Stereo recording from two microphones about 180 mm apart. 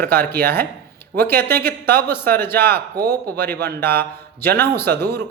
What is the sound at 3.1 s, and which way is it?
A man's voice, 10° left (ahead or behind).